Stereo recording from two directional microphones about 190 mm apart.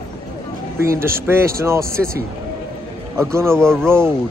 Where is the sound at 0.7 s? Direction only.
15° right (ahead or behind).